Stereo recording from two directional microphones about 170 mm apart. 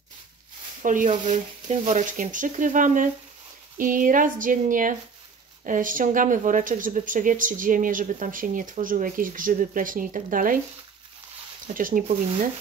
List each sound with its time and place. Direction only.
0.8 s speech: 50° right (ahead or behind)
11.6 s speech: 55° right (ahead or behind)